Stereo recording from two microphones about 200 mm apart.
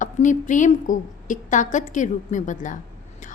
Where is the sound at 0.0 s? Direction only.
40° left (ahead or behind).